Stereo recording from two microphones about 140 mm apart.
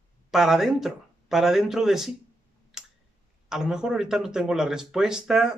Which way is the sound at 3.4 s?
5° right (ahead or behind).